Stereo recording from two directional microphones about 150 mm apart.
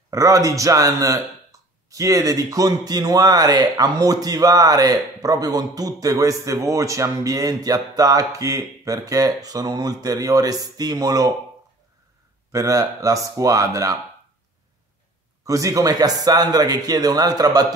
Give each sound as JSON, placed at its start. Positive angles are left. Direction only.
{"t": 0.1, "sound": "speech", "side_deg": -20}
{"t": 12.5, "sound": "speech", "side_deg": -20}
{"t": 15.4, "sound": "speech", "side_deg": -20}